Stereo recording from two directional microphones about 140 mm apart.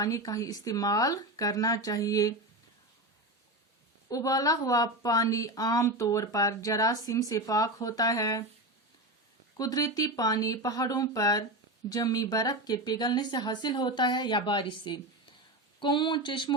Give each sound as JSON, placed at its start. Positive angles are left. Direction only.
{"t": 0.0, "sound": "speech", "side_deg": 25}
{"t": 4.1, "sound": "speech", "side_deg": 25}
{"t": 9.6, "sound": "speech", "side_deg": 25}